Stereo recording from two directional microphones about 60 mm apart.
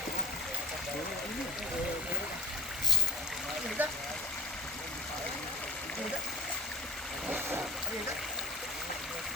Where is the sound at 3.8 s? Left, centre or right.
Right.